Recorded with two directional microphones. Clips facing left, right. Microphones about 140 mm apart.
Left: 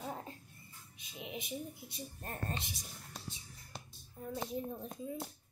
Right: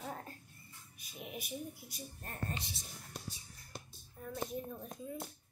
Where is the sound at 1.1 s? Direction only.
20° left (ahead or behind).